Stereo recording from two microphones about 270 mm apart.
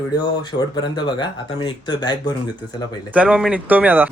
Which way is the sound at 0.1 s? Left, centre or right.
Centre.